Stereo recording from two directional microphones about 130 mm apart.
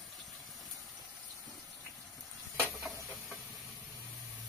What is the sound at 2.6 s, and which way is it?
Stir, centre (ahead or behind).